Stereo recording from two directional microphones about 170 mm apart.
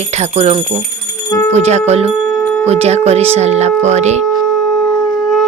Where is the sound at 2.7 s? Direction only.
40° right (ahead or behind).